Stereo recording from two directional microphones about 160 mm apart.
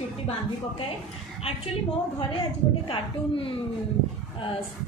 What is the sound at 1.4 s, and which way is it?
Speech, 40° left (ahead or behind).